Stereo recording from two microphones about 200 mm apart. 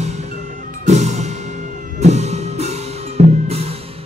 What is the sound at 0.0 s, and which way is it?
Music, 35° right (ahead or behind).